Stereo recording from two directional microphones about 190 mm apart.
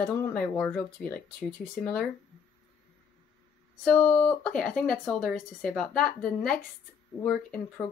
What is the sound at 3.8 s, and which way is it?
Speech, 5° left (ahead or behind).